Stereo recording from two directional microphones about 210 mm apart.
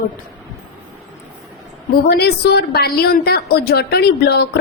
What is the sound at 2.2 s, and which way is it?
A woman's voice, 50° left (ahead or behind).